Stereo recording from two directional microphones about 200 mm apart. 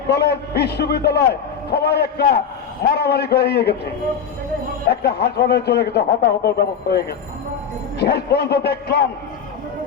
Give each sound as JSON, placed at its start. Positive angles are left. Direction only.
{"t": 0.1, "sound": "a man's voice", "side_deg": 55}
{"t": 4.9, "sound": "a man's voice", "side_deg": 55}
{"t": 7.9, "sound": "a man's voice", "side_deg": 55}